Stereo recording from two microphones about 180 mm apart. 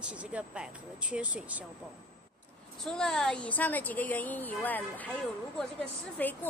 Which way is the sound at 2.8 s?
5° left (ahead or behind).